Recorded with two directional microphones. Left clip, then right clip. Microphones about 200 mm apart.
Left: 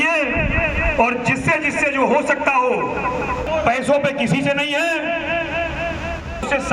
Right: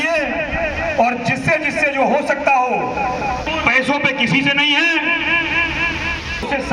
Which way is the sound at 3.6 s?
65° left (ahead or behind).